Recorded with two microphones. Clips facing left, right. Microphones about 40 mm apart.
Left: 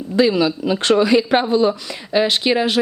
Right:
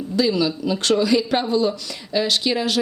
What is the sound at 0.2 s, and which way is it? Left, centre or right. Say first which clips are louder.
Speech: left 4 dB; left.